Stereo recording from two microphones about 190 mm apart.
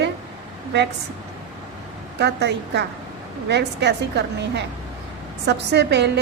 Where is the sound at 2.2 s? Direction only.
65° right (ahead or behind).